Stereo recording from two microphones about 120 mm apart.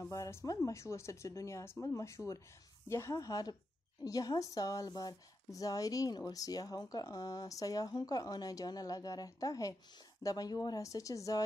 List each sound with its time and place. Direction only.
0.1 s speech: 25° left (ahead or behind)